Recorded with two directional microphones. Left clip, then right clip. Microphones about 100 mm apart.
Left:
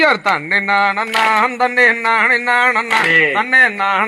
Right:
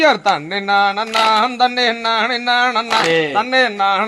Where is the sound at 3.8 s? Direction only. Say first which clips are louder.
Even; 45° right (ahead or behind).